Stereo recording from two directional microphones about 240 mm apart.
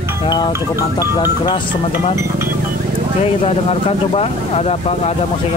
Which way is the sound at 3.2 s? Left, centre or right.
Left.